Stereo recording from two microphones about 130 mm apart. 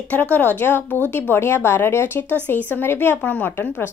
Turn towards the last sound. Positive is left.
turn(degrees=15)  # may be behind; listen again after turning